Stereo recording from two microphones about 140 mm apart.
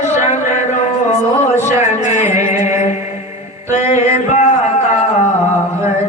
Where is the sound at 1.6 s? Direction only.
60° left (ahead or behind).